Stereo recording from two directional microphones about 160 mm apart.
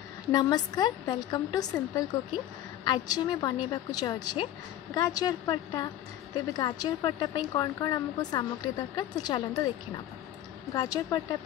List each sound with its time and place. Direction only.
0.3 s a woman's voice: 25° left (ahead or behind)
10.7 s a woman's voice: 25° left (ahead or behind)